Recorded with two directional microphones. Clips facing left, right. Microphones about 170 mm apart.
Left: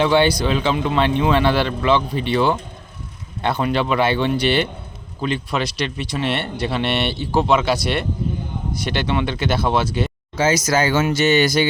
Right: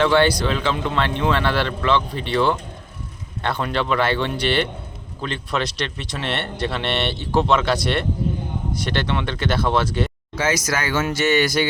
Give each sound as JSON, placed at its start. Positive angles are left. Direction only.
{"t": 0.0, "sound": "speech", "side_deg": 15}
{"t": 10.3, "sound": "speech", "side_deg": 25}